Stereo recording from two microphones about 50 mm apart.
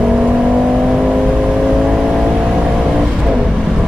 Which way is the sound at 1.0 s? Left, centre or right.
Centre.